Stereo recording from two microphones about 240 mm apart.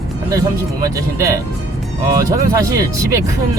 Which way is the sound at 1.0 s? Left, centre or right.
Centre.